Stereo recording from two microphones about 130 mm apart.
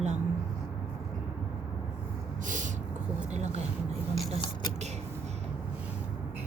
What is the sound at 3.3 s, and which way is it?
Speech, 60° right (ahead or behind).